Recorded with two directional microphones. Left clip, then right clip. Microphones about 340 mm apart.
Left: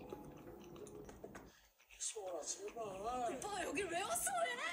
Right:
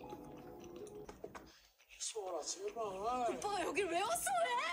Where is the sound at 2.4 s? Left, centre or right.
Right.